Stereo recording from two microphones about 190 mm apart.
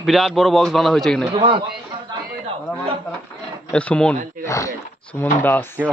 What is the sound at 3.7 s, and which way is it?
Speech, 5° left (ahead or behind).